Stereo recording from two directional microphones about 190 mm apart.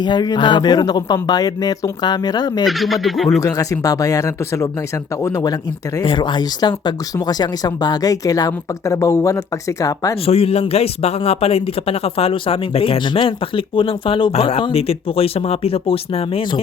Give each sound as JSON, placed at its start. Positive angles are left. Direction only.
{"t": 0.0, "sound": "speech", "side_deg": 20}
{"t": 2.6, "sound": "speech", "side_deg": 0}
{"t": 3.4, "sound": "speech", "side_deg": 15}
{"t": 6.0, "sound": "speech", "side_deg": 25}
{"t": 10.2, "sound": "speech", "side_deg": 30}